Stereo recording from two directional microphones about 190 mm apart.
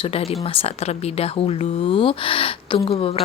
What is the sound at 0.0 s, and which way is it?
A woman's voice, 30° left (ahead or behind).